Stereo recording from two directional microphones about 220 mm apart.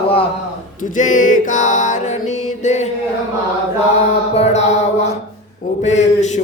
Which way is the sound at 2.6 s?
30° left (ahead or behind).